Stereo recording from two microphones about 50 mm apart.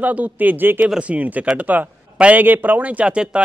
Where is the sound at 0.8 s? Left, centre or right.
Centre.